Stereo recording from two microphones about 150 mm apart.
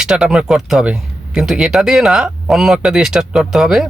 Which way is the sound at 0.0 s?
5° right (ahead or behind).